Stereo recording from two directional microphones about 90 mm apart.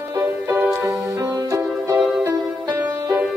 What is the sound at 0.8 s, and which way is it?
Music, 40° right (ahead or behind).